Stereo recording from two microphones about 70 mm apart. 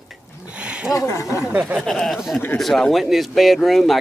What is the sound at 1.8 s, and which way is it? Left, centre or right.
Speech, centre.